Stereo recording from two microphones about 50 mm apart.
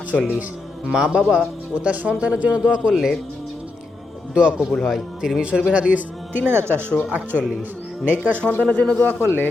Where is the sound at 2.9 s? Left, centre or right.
Centre.